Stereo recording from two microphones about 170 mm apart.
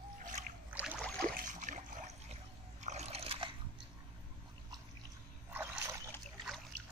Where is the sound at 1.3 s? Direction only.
50° right (ahead or behind); by 3.5 s 35° right (ahead or behind).